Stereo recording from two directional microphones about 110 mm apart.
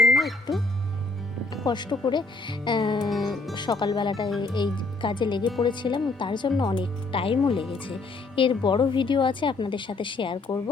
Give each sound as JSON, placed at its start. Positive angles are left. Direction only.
{"t": 0.0, "sound": "music", "side_deg": 0}
{"t": 1.6, "sound": "a woman's voice", "side_deg": 40}